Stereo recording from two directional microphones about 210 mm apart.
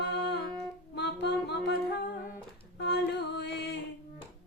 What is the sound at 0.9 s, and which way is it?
Music, 55° left (ahead or behind).